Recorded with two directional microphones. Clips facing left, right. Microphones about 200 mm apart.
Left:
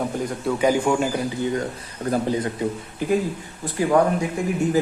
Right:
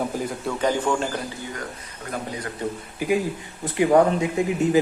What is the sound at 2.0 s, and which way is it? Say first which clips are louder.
Speech: left 9 dB; 30° left (ahead or behind).